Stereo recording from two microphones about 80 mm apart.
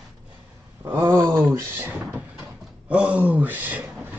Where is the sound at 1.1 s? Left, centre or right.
Right.